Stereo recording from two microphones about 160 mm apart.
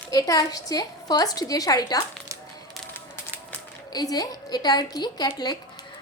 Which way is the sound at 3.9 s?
25° left (ahead or behind).